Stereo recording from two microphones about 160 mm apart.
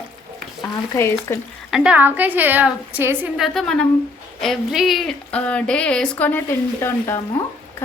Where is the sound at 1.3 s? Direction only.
15° left (ahead or behind).